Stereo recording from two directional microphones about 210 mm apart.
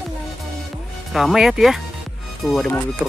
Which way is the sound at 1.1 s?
Centre (ahead or behind).